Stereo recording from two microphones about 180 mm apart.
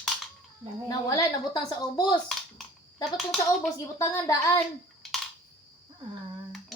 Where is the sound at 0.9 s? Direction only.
20° left (ahead or behind).